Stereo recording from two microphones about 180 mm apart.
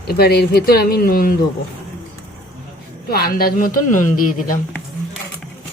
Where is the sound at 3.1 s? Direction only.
55° left (ahead or behind).